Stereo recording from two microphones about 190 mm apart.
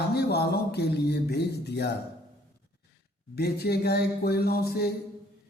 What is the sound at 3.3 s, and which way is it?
Speech, 55° left (ahead or behind).